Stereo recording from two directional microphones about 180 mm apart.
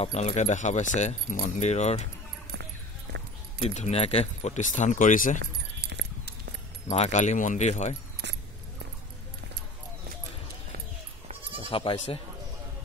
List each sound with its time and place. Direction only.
0.0 s speech: 35° left (ahead or behind)
3.7 s speech: 35° left (ahead or behind)
5.4 s keys jangling: 75° right (ahead or behind)
6.9 s speech: 40° left (ahead or behind)
11.7 s speech: 30° left (ahead or behind)